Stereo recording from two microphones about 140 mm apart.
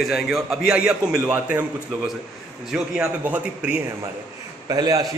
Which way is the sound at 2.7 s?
10° right (ahead or behind).